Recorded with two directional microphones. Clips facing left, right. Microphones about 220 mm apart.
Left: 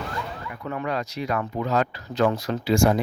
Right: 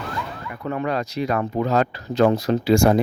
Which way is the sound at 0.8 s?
30° right (ahead or behind).